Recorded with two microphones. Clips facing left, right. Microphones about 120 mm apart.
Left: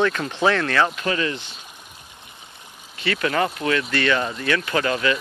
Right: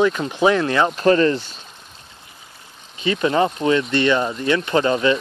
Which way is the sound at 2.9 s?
20° right (ahead or behind).